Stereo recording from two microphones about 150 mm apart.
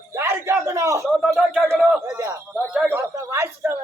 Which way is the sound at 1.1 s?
Centre (ahead or behind).